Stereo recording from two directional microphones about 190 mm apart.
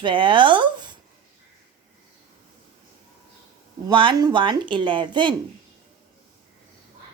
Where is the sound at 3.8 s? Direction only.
25° right (ahead or behind).